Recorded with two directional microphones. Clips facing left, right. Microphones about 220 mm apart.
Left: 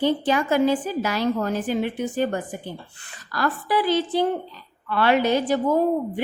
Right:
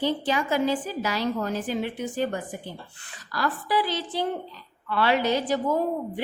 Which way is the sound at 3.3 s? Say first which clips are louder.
Left 3 dB; 55° left (ahead or behind).